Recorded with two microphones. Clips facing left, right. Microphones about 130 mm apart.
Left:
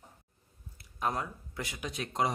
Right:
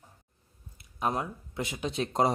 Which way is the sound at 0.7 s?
20° right (ahead or behind).